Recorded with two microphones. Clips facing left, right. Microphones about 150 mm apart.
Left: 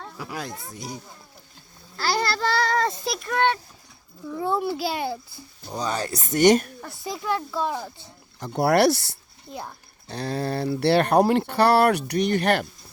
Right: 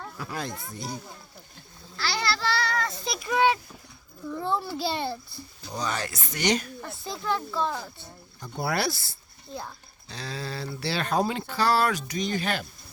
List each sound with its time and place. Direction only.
0.0 s speech: 15° left (ahead or behind)
2.0 s a sound: 45° left (ahead or behind)
3.0 s a child's voice: centre (ahead or behind)
4.3 s speech: 10° left (ahead or behind)
5.8 s speech: 35° left (ahead or behind); by 6.7 s 50° left (ahead or behind)
6.8 s speech: 10° left (ahead or behind)
8.4 s speech: 85° left
9.5 s speech: 15° left (ahead or behind)
10.1 s speech: 55° left (ahead or behind)